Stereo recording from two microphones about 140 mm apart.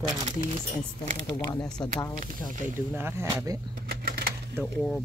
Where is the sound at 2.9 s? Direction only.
20° right (ahead or behind).